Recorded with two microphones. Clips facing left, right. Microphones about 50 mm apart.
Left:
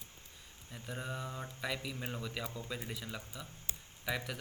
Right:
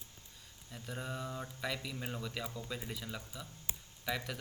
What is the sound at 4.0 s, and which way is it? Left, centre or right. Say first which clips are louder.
Speech: even; centre.